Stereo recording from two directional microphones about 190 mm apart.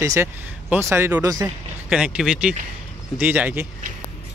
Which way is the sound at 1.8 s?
5° right (ahead or behind).